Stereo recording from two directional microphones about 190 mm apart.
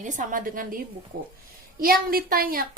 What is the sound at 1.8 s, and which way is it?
Speech, 50° right (ahead or behind).